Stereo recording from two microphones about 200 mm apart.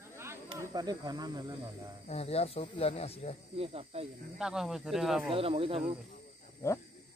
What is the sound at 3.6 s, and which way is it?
Speech, 30° right (ahead or behind).